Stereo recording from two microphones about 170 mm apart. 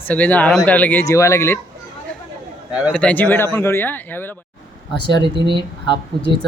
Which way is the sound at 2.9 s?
5° left (ahead or behind).